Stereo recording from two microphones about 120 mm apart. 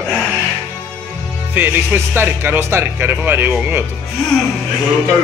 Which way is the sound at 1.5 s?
15° right (ahead or behind).